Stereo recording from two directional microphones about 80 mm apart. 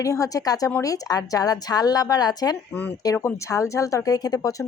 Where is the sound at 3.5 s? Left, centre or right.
Left.